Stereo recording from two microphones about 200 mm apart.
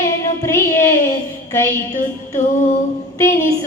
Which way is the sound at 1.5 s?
10° left (ahead or behind).